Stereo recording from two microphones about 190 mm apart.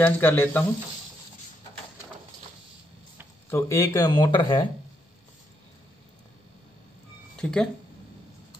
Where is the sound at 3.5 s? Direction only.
15° left (ahead or behind).